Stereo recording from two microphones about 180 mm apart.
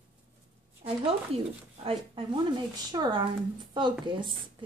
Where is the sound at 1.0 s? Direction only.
30° right (ahead or behind).